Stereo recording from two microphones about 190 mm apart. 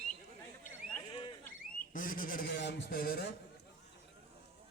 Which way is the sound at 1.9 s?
45° left (ahead or behind).